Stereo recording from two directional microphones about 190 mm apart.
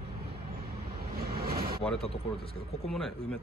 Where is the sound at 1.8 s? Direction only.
Centre (ahead or behind).